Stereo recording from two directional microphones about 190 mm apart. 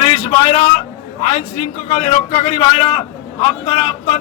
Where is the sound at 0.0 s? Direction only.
35° left (ahead or behind).